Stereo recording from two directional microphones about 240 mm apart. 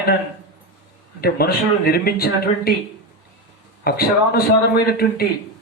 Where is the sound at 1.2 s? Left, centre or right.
Left.